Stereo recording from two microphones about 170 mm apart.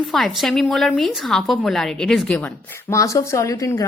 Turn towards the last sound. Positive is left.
turn(degrees=20)  # may be behind; listen again after turning